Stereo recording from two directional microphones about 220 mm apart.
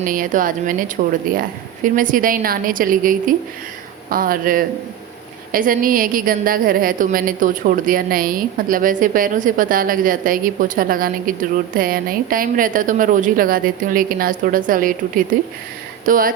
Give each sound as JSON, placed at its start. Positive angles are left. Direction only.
{"t": 0.0, "sound": "a woman's voice", "side_deg": -40}